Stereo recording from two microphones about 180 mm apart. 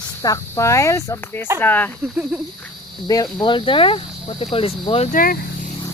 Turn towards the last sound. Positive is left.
turn(degrees=50)  # may be behind; listen again after turning